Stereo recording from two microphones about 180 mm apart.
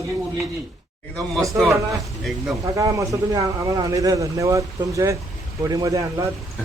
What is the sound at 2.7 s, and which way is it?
Speech, 20° right (ahead or behind).